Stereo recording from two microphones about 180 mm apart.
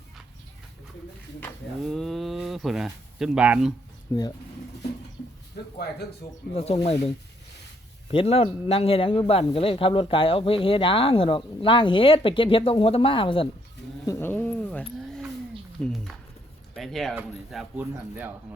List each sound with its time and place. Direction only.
1.8 s a sound: centre (ahead or behind)
4.1 s speech: 15° left (ahead or behind)
6.5 s speech: 35° left (ahead or behind)
8.1 s speech: 30° left (ahead or behind)
14.0 s speech: 15° left (ahead or behind); by 18.3 s 10° right (ahead or behind)